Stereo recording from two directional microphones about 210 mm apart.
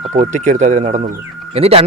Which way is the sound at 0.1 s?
35° right (ahead or behind).